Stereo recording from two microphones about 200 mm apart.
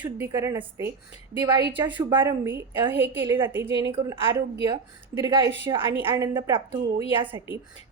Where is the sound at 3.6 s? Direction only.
60° right (ahead or behind).